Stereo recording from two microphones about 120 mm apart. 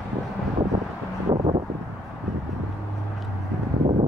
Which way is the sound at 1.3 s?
50° right (ahead or behind).